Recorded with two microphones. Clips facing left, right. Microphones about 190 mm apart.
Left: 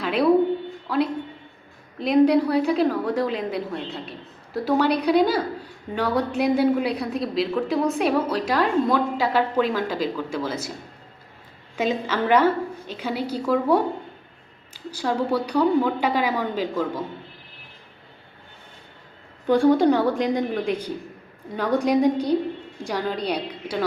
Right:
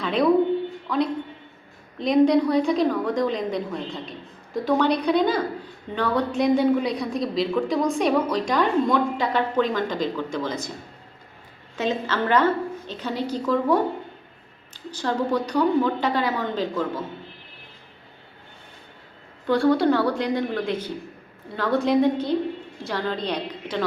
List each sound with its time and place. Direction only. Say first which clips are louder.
0.0 s a sound: even; 5° left (ahead or behind)
0.9 s a woman's voice: left 2 dB; 5° left (ahead or behind)
11.8 s a woman's voice: left 1 dB; 10° left (ahead or behind)
14.8 s a woman's voice: left 1 dB; 10° left (ahead or behind)
19.5 s a woman's voice: left 2 dB; 15° left (ahead or behind)